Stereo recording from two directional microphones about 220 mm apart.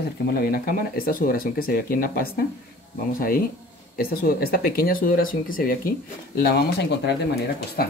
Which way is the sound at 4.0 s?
45° left (ahead or behind).